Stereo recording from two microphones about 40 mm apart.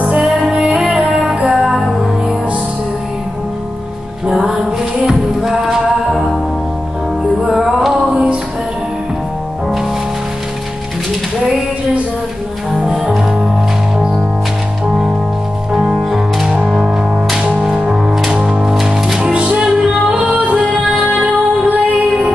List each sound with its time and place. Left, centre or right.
0.6 s music: right
1.2 s music: right
1.5 s music: centre
4.6 s music: centre
7.4 s music: centre
7.9 s music: centre
12.7 s music: centre
14.9 s music: centre
15.9 s music: centre
19.1 s music: right
20.1 s music: right